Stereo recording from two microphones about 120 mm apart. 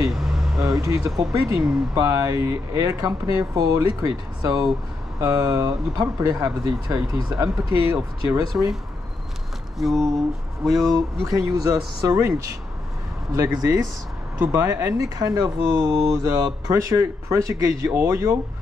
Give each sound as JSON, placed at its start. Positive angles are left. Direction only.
{"t": 0.1, "sound": "a sound", "side_deg": 0}
{"t": 0.6, "sound": "speech", "side_deg": -30}
{"t": 9.8, "sound": "speech", "side_deg": 0}
{"t": 11.3, "sound": "speech", "side_deg": -30}